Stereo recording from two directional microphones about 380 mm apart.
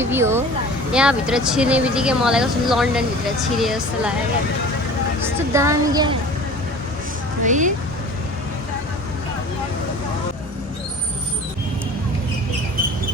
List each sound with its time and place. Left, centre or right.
0.0 s speech: centre
5.2 s speech: centre
7.4 s speech: centre